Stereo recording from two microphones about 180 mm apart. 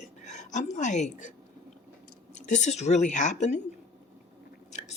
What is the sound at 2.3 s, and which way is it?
Speech, 40° left (ahead or behind).